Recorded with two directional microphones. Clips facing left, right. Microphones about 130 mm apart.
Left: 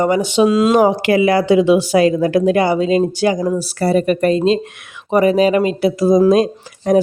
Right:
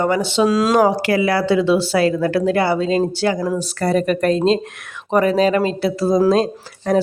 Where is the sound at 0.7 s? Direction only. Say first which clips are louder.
Left 3 dB; 20° left (ahead or behind).